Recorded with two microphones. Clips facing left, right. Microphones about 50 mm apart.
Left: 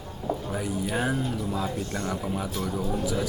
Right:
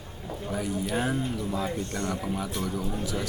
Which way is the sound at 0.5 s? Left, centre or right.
Centre.